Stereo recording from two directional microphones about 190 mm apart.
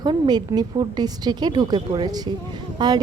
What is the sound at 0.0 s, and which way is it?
A woman's voice, 20° right (ahead or behind).